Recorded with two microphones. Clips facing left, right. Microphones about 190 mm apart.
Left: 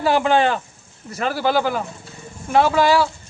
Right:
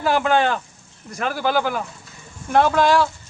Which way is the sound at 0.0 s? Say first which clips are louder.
Left 2 dB; 5° left (ahead or behind).